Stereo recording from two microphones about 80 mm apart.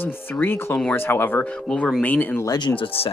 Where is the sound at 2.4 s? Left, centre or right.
Left.